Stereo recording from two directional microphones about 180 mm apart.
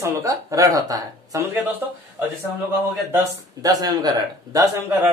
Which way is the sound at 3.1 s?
20° right (ahead or behind).